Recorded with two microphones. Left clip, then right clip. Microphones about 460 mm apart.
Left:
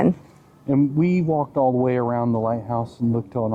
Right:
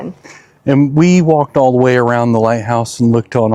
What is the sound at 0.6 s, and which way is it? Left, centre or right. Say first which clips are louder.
A man's voice: right 9 dB; right.